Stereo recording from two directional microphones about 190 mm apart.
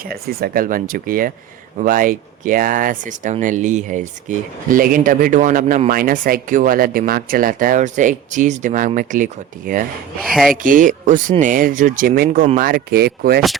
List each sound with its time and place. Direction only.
0.0 s speech: 55° right (ahead or behind)
10.2 s speech: centre (ahead or behind)
10.5 s speech: 45° right (ahead or behind)